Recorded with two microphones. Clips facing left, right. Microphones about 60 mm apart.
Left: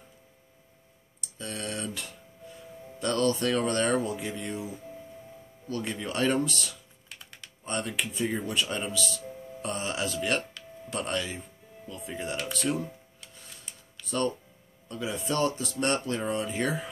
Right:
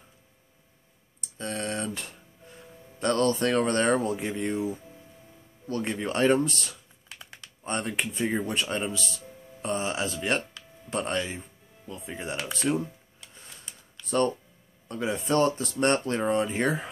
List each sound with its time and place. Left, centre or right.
1.4 s speech: right
5.7 s speech: right
7.6 s speech: right
14.0 s speech: right